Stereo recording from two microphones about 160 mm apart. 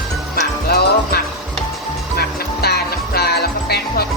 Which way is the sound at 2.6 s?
85° left.